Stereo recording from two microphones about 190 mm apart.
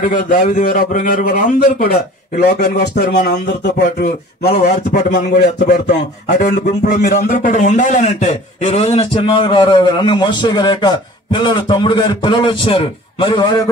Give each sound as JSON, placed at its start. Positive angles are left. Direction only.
{"t": 0.1, "sound": "a man's voice", "side_deg": 45}
{"t": 2.8, "sound": "speech", "side_deg": 60}
{"t": 4.6, "sound": "a man's voice", "side_deg": 40}